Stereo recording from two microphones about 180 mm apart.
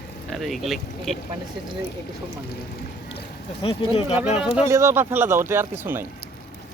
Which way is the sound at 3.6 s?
30° left (ahead or behind).